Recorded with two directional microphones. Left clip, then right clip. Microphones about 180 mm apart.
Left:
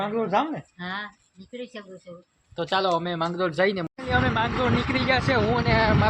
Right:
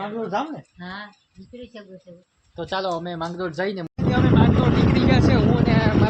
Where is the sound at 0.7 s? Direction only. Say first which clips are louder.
Left 3 dB; 25° left (ahead or behind).